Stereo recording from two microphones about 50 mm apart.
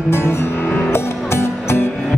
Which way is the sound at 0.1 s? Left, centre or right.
Left.